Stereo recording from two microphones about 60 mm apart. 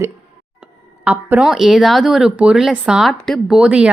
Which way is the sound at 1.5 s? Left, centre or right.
Centre.